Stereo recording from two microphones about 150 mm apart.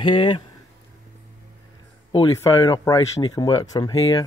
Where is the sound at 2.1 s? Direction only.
25° left (ahead or behind).